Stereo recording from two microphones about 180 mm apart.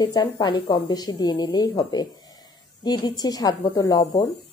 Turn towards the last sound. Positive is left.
turn(degrees=20)  # may be behind; listen again after turning